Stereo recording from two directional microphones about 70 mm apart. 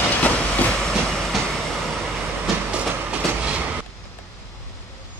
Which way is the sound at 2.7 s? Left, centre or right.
Centre.